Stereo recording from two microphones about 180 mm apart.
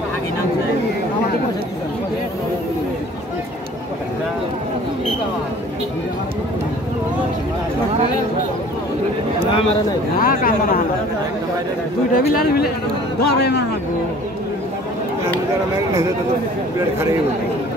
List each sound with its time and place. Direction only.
10.1 s speech: 50° left (ahead or behind)
12.3 s speech: 60° left (ahead or behind)